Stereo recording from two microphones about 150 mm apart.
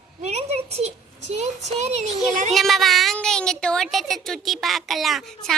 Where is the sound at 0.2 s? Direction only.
45° right (ahead or behind).